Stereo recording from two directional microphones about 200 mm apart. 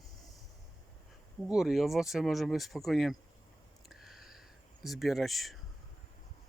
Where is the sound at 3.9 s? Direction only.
Centre (ahead or behind).